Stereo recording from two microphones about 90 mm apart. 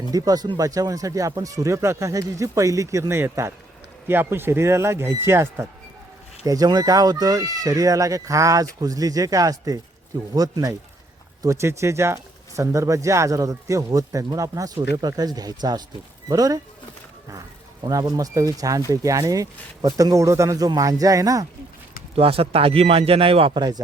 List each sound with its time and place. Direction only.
0.1 s speech: 45° right (ahead or behind); by 5.6 s 30° right (ahead or behind)
6.4 s speech: 45° right (ahead or behind)
11.4 s speech: 30° right (ahead or behind)
17.8 s speech: 45° right (ahead or behind)
22.1 s speech: 90° right
23.6 s speech: 50° right (ahead or behind)